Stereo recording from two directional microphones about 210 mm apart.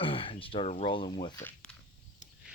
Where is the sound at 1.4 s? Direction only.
5° left (ahead or behind).